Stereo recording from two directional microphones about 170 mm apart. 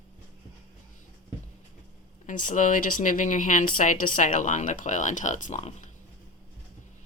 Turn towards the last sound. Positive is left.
turn(degrees=45)  # may be behind; listen again after turning